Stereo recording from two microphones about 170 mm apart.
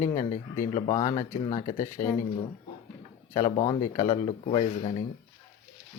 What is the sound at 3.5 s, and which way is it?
A man's voice, 30° left (ahead or behind).